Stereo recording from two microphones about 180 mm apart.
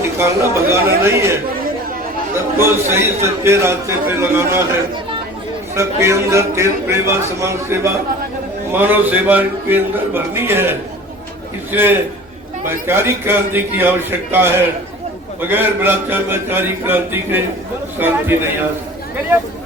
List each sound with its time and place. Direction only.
0.2 s a man's voice: 15° right (ahead or behind)
5.7 s a man's voice: 15° right (ahead or behind)